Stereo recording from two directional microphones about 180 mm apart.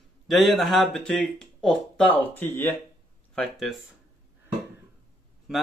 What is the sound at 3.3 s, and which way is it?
Speech, centre (ahead or behind).